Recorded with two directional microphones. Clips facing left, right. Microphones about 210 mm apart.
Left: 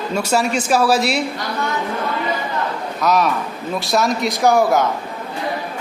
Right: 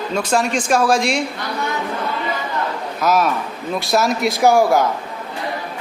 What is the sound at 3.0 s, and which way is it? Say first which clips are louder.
A man's voice: even; centre (ahead or behind).